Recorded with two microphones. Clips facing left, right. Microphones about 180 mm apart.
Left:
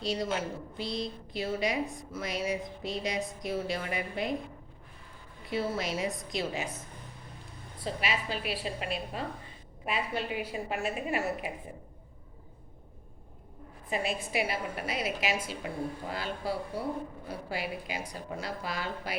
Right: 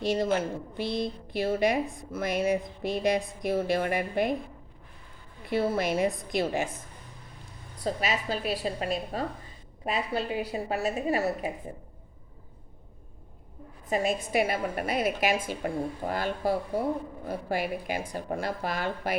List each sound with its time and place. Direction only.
0.1 s a woman's voice: 55° right (ahead or behind)
5.5 s a woman's voice: 55° right (ahead or behind)
7.9 s a woman's voice: 40° right (ahead or behind)
13.9 s a woman's voice: 45° right (ahead or behind)